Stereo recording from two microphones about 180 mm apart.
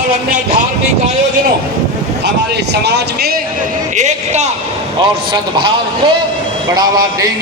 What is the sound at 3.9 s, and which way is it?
Speech, 40° right (ahead or behind).